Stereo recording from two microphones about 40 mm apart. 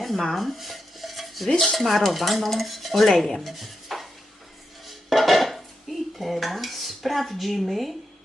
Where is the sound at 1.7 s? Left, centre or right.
Centre.